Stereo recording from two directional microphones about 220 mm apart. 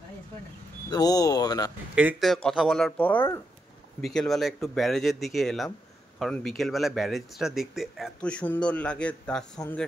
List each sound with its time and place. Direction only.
0.8 s speech: 15° left (ahead or behind)
2.0 s speech: 5° right (ahead or behind)